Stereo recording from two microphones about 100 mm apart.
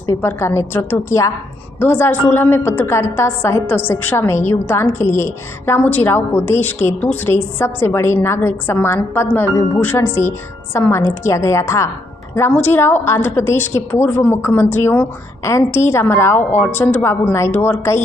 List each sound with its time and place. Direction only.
0.0 s a woman's voice: 25° left (ahead or behind)
12.4 s a woman's voice: 20° left (ahead or behind)